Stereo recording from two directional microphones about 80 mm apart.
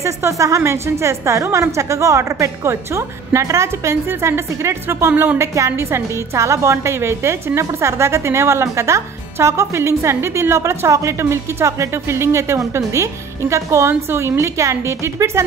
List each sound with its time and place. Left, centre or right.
0.0 s a woman's voice: right